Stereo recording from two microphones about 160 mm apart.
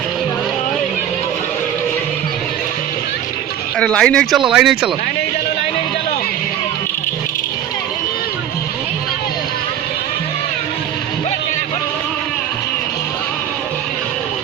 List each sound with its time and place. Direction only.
3.8 s speech: 5° left (ahead or behind)